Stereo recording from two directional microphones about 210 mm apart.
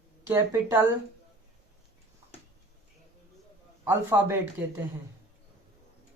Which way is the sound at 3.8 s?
10° right (ahead or behind).